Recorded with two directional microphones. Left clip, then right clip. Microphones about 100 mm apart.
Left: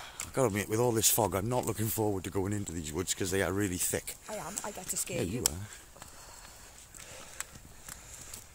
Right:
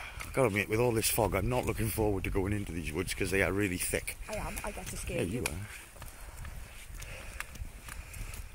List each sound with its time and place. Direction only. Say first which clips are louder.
0.0 s speech: right 1 dB; 20° left (ahead or behind)
2.3 s speech: even; 10° left (ahead or behind)
4.6 s speech: left 1 dB; centre (ahead or behind)